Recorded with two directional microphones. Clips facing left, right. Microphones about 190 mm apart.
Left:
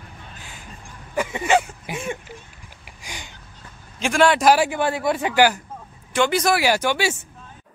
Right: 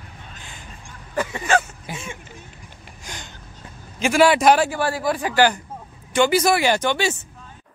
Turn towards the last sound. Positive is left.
turn(degrees=10)  # may be behind; listen again after turning